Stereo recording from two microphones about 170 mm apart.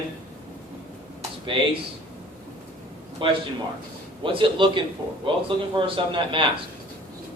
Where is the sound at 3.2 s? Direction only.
30° right (ahead or behind).